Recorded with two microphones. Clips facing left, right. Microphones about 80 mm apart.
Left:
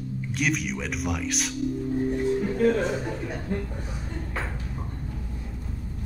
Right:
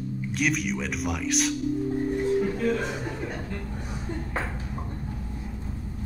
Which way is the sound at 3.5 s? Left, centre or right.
Left.